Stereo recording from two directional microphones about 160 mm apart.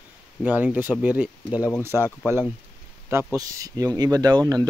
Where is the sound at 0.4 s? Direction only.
10° right (ahead or behind).